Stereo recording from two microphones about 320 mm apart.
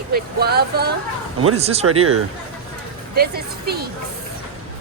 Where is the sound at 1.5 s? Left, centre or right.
Centre.